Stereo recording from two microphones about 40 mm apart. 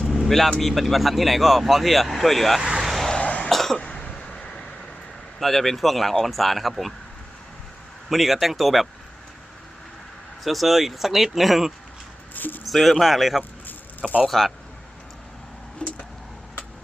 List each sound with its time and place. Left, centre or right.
0.3 s speech: centre
2.6 s vehicle: centre
2.8 s vehicle: centre
3.2 s cough: left
3.5 s cough: centre
4.1 s vehicle: left
5.4 s speech: centre
8.1 s speech: centre
10.4 s speech: centre
12.3 s a sound: left
12.6 s speech: centre
15.8 s vehicle: left